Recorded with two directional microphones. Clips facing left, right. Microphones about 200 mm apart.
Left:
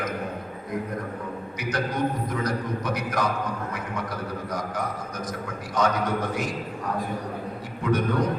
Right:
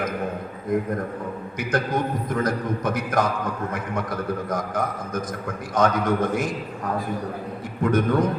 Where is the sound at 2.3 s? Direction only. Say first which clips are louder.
Right 3 dB; 50° right (ahead or behind).